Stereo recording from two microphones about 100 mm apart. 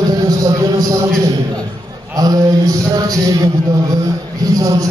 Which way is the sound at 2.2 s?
40° right (ahead or behind).